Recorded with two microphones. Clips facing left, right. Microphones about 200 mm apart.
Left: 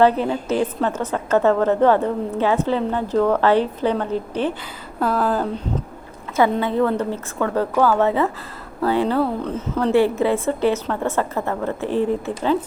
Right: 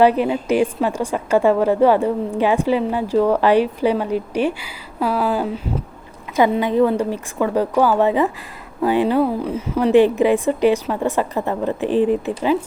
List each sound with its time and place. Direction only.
0.0 s a woman's voice: 15° right (ahead or behind)